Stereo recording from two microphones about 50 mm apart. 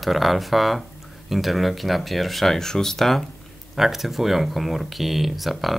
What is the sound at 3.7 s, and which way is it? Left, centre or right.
Speech, centre.